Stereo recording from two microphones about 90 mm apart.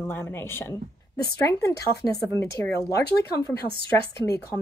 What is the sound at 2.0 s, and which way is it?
Speech, 5° right (ahead or behind).